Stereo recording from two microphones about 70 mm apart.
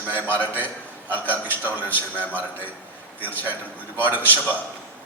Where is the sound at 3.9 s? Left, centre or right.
Right.